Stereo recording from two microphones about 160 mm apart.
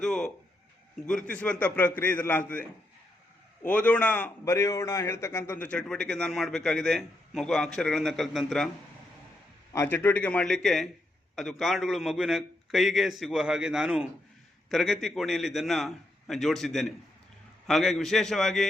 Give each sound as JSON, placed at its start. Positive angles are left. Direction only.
{"t": 0.0, "sound": "a man's voice", "side_deg": 5}
{"t": 9.7, "sound": "a man's voice", "side_deg": 15}